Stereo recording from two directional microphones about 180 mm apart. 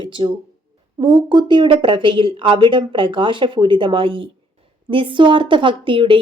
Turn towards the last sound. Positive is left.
turn(degrees=-30)  # may be behind; listen again after turning